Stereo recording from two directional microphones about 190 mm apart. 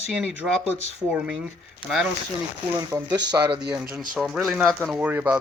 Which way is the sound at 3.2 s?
20° right (ahead or behind).